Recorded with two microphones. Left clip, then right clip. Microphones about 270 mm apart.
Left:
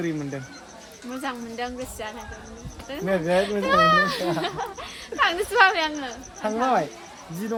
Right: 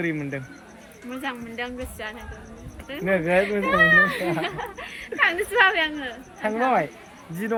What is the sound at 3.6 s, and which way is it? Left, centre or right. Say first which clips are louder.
Speech: right 1 dB; left.